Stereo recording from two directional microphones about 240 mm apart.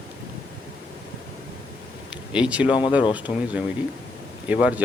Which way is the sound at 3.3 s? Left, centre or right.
Left.